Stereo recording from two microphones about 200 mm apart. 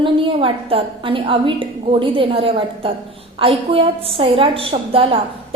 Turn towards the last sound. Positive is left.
turn(degrees=-30)  # may be behind; listen again after turning